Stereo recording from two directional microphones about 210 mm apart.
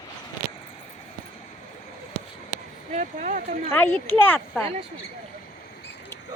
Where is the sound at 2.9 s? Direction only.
35° right (ahead or behind).